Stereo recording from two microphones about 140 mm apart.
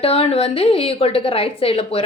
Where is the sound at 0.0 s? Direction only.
45° left (ahead or behind).